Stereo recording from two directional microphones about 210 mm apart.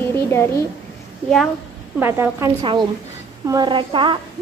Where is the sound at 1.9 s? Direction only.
10° right (ahead or behind).